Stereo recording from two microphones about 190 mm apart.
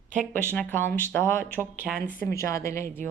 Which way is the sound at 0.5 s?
10° left (ahead or behind).